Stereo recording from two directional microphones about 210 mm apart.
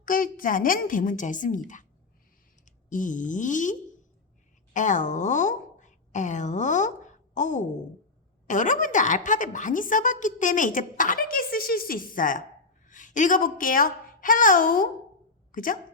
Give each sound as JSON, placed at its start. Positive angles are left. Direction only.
{"t": 0.0, "sound": "a woman's voice", "side_deg": 40}